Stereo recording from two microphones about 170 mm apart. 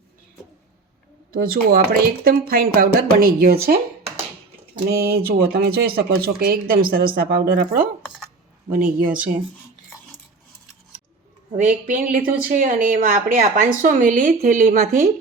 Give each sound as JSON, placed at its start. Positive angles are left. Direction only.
{"t": 1.3, "sound": "speech", "side_deg": -60}
{"t": 11.5, "sound": "speech", "side_deg": -45}